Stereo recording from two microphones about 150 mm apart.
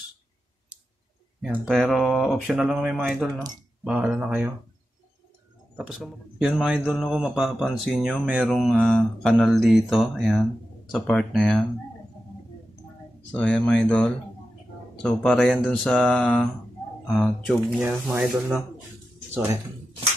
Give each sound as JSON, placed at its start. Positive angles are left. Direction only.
{"t": 1.7, "sound": "mantra", "side_deg": 0}
{"t": 3.8, "sound": "speech", "side_deg": -10}
{"t": 5.8, "sound": "mantra", "side_deg": -5}
{"t": 13.3, "sound": "speech", "side_deg": 5}
{"t": 15.0, "sound": "mantra", "side_deg": 5}
{"t": 17.6, "sound": "speech", "side_deg": -10}